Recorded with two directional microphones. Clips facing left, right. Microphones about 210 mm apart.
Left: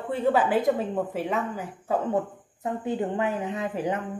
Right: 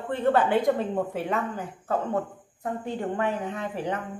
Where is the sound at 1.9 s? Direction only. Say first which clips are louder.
Left 2 dB; 15° left (ahead or behind).